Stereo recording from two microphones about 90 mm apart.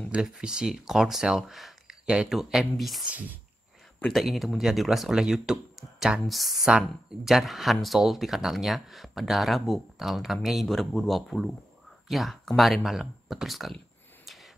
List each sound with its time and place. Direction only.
0.1 s speech: 5° right (ahead or behind)
3.1 s speech: 20° right (ahead or behind)
4.0 s speech: centre (ahead or behind)
14.2 s a sound: centre (ahead or behind)